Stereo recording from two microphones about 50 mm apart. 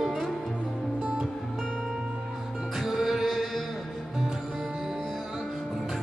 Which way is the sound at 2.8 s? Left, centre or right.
Centre.